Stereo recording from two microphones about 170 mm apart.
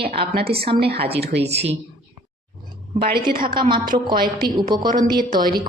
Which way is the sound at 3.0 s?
65° right (ahead or behind).